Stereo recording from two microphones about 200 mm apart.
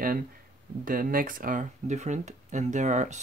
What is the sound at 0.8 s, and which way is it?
Speech, 45° right (ahead or behind).